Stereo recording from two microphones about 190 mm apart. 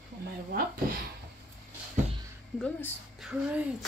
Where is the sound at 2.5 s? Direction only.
5° left (ahead or behind).